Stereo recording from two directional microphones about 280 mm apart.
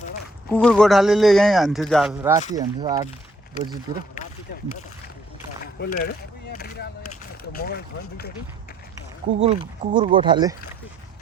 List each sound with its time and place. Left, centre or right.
0.5 s speech: centre
2.1 s speech: centre
5.8 s a sound: left
7.5 s speech: left
9.4 s speech: right